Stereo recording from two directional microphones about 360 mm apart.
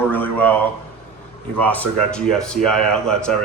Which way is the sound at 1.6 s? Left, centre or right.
Centre.